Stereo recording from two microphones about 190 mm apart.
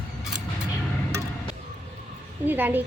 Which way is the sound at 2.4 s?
10° right (ahead or behind).